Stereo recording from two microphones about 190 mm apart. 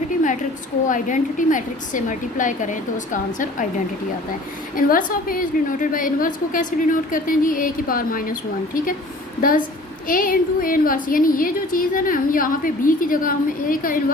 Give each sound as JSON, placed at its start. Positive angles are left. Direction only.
{"t": 0.9, "sound": "a woman's voice", "side_deg": 45}
{"t": 4.9, "sound": "a woman's voice", "side_deg": 50}